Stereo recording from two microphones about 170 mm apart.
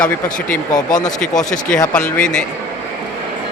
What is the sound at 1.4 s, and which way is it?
Speech, 50° left (ahead or behind).